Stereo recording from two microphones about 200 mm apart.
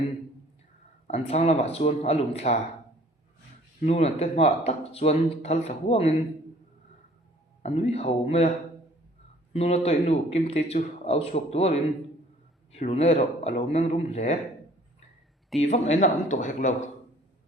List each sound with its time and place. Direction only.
1.0 s speech: 35° left (ahead or behind)
3.8 s speech: 30° left (ahead or behind)
7.6 s speech: 35° left (ahead or behind)
9.5 s speech: 30° left (ahead or behind)
15.6 s speech: 35° left (ahead or behind)